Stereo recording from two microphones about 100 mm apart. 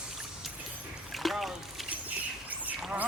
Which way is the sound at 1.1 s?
Centre (ahead or behind).